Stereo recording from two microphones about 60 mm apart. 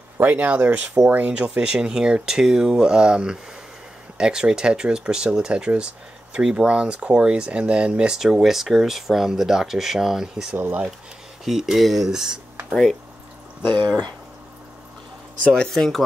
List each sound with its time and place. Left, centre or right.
0.2 s speech: right
1.3 s speech: centre
8.2 s speech: centre
10.5 s speech: right
11.4 s speech: centre
15.4 s speech: centre